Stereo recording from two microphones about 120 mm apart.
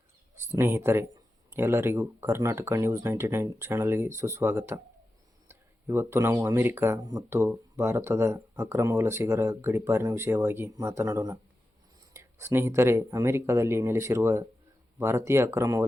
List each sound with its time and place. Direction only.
0.3 s speech: 20° right (ahead or behind)